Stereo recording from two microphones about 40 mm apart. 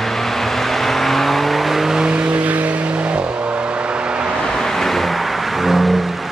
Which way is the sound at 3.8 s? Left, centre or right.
Right.